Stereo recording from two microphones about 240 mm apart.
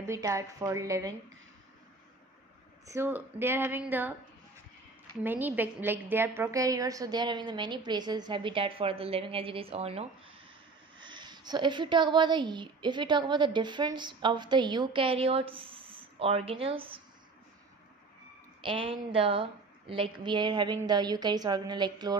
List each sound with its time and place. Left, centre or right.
0.0 s a woman's voice: centre
2.9 s a woman's voice: centre
5.2 s a woman's voice: centre
18.6 s a woman's voice: right